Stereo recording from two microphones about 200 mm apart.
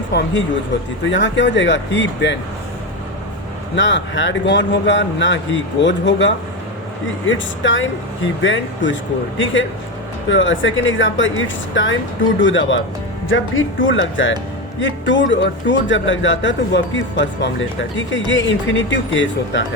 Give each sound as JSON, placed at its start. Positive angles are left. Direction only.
{"t": 0.1, "sound": "speech", "side_deg": 55}
{"t": 1.0, "sound": "speech", "side_deg": 65}
{"t": 3.8, "sound": "speech", "side_deg": 65}